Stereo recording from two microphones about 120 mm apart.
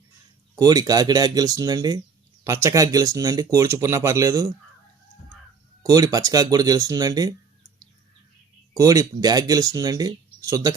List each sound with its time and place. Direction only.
0.6 s speech: 30° right (ahead or behind)
5.8 s speech: 30° right (ahead or behind)
8.8 s speech: 30° right (ahead or behind)